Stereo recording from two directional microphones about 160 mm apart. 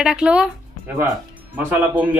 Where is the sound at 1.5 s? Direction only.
10° right (ahead or behind).